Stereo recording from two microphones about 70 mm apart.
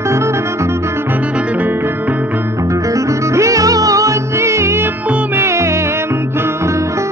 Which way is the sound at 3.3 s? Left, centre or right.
Right.